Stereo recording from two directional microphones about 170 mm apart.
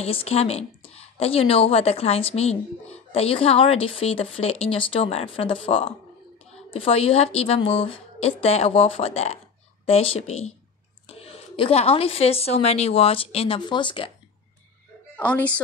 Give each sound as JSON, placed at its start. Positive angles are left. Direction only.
{"t": 0.0, "sound": "a woman's voice", "side_deg": 35}
{"t": 15.1, "sound": "a woman's voice", "side_deg": 10}